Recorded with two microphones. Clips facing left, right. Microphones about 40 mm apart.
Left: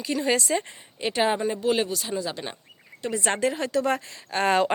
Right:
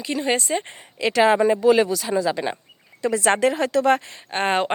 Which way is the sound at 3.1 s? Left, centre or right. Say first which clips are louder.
Right 6 dB; right.